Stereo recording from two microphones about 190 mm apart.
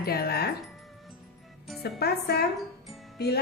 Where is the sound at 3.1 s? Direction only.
60° left (ahead or behind).